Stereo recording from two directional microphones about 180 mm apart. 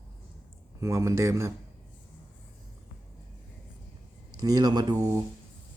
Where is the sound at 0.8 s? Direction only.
15° right (ahead or behind).